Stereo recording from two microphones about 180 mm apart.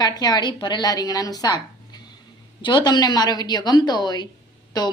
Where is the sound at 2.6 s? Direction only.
25° left (ahead or behind).